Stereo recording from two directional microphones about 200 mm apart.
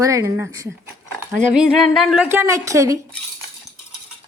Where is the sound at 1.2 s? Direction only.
5° right (ahead or behind).